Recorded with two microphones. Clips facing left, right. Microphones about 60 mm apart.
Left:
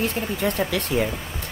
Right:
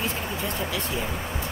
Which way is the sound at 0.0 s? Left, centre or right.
Left.